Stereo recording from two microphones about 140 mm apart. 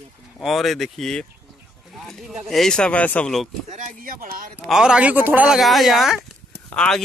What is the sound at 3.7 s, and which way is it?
Speech, 70° right (ahead or behind).